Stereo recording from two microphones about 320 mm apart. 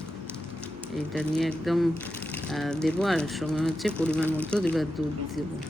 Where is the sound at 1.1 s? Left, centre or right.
Centre.